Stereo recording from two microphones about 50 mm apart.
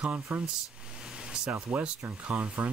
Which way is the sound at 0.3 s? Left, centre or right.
Right.